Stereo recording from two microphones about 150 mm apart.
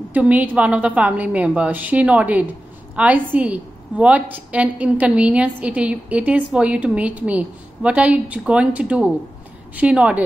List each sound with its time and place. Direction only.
0.1 s a woman's voice: 10° right (ahead or behind)